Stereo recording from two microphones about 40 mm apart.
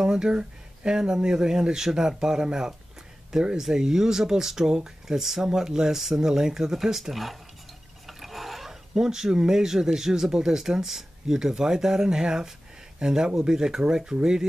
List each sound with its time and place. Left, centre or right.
0.0 s speech: centre
8.1 s a sound: centre
8.9 s speech: centre